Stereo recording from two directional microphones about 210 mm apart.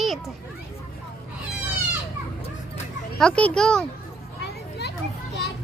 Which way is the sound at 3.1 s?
5° left (ahead or behind).